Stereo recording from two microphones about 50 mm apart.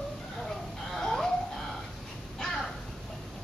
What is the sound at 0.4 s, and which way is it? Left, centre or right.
Dog, centre.